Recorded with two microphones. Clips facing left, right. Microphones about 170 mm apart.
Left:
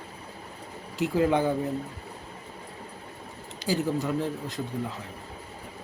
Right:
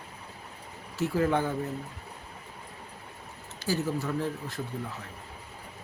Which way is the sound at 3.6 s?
15° left (ahead or behind).